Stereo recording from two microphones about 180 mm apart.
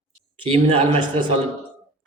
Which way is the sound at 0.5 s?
30° right (ahead or behind).